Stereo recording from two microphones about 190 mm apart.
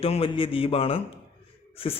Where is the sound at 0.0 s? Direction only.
30° left (ahead or behind).